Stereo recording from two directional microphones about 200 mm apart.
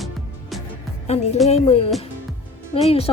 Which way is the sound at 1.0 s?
35° left (ahead or behind).